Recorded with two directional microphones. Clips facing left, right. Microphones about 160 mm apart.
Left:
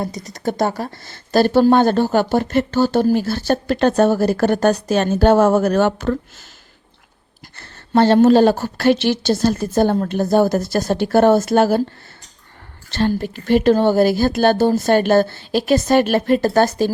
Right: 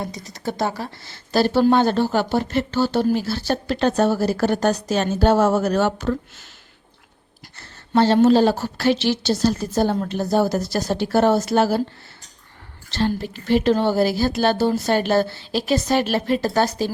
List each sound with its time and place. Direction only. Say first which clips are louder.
0.0 s speech: left 5 dB; 45° left (ahead or behind)
7.5 s speech: left 3 dB; 60° left (ahead or behind)
12.9 s speech: left 3 dB; 50° left (ahead or behind)